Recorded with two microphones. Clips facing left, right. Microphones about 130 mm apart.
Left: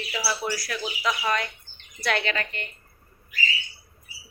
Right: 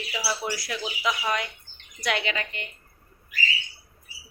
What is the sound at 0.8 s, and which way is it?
Speech, 10° right (ahead or behind).